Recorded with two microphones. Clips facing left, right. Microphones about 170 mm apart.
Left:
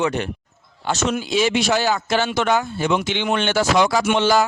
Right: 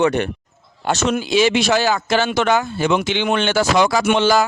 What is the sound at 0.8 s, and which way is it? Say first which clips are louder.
Speech: right 3 dB; 75° right (ahead or behind).